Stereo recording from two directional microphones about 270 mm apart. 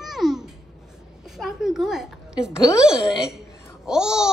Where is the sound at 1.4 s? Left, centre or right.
Centre.